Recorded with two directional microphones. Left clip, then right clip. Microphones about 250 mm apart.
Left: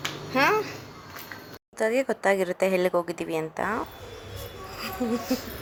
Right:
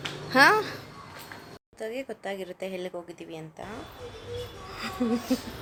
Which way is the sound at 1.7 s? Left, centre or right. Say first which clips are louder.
Left 10 dB; centre.